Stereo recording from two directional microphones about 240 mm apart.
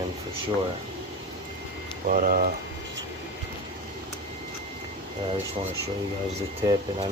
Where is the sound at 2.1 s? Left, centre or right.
Right.